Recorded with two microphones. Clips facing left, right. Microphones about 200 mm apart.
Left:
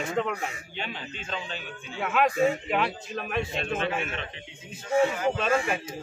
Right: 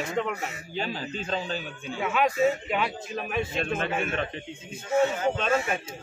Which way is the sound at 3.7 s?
50° right (ahead or behind).